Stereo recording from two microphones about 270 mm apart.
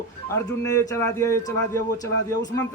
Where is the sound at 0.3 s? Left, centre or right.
Centre.